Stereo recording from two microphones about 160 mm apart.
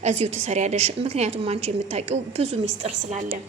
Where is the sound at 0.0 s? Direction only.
45° right (ahead or behind).